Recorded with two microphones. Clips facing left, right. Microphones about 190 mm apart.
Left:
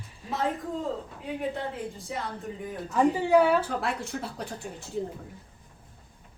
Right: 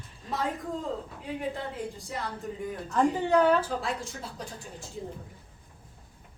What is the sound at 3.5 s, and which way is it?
A woman's voice, 65° left (ahead or behind).